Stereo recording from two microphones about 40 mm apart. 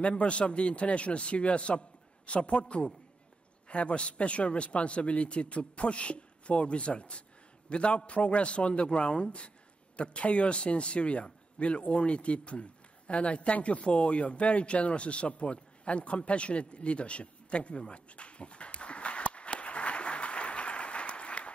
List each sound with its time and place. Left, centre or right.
0.0 s a man's voice: left
3.6 s a man's voice: left